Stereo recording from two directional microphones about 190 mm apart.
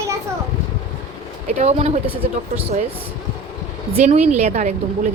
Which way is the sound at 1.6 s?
35° right (ahead or behind).